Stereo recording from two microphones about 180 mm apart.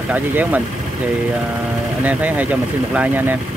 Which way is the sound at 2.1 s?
10° right (ahead or behind).